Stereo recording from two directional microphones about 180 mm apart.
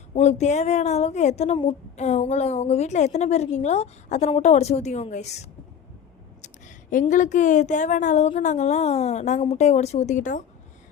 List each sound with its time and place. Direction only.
0.2 s speech: 40° left (ahead or behind)